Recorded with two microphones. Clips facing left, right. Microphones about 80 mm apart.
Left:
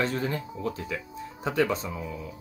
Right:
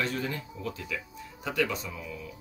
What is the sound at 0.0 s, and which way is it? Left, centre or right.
Speech, left.